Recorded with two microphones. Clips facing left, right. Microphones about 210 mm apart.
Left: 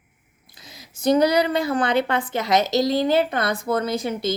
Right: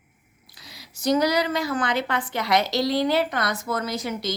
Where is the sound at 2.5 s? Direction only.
45° left (ahead or behind).